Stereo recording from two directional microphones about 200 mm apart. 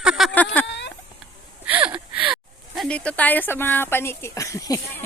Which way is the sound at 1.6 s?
10° right (ahead or behind).